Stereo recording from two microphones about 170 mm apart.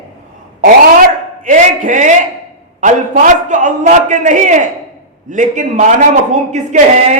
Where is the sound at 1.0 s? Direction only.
50° right (ahead or behind).